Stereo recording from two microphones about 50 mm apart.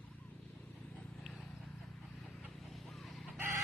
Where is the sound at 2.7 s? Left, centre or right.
Centre.